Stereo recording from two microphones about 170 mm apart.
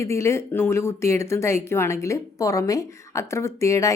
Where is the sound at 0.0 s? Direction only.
15° left (ahead or behind).